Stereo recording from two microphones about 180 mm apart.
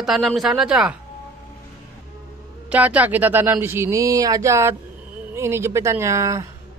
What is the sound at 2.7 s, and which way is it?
Speech, 10° right (ahead or behind).